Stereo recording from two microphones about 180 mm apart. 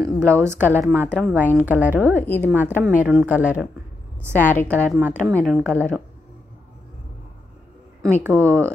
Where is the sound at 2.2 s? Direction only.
10° left (ahead or behind).